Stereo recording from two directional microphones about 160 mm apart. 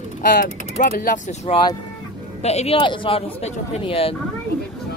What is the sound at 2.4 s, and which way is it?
A man's voice, 40° left (ahead or behind).